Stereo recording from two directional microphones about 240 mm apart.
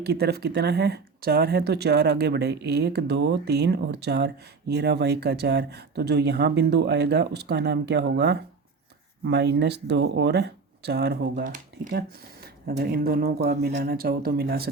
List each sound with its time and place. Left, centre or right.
0.0 s speech: right